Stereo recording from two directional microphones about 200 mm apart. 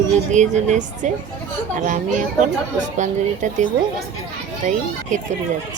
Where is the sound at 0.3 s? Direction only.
35° right (ahead or behind).